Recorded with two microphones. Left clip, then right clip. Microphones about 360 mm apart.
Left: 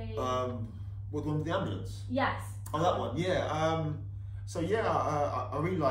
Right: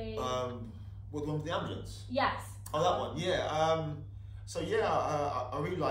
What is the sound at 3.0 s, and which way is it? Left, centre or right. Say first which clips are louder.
A man's voice: left 1 dB; centre.